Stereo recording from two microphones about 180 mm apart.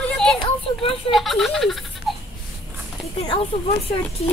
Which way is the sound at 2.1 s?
Centre (ahead or behind).